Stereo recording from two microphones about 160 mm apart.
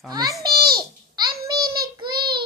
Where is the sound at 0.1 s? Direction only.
25° right (ahead or behind).